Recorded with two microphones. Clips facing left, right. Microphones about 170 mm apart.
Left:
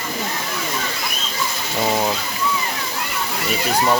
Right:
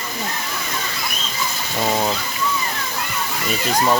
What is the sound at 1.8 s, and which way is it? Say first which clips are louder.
Speech: even; 5° left (ahead or behind).